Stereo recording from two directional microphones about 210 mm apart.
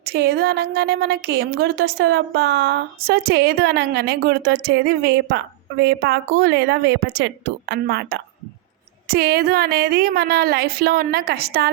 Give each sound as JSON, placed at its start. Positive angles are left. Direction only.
{"t": 0.0, "sound": "a woman's voice", "side_deg": -50}